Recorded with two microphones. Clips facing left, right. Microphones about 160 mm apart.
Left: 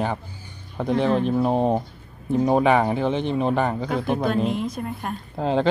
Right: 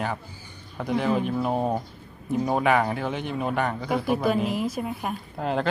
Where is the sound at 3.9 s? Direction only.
5° right (ahead or behind).